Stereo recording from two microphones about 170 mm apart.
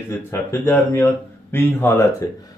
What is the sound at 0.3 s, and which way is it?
Speech, 15° left (ahead or behind).